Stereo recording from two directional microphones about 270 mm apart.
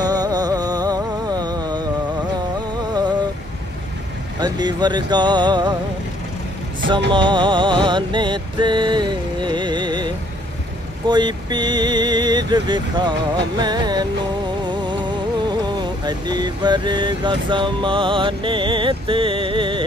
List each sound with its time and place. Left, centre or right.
0.0 s music: centre
2.9 s a sound: centre
4.4 s speech: centre
7.1 s music: centre
11.1 s speech: centre
15.6 s a sound: centre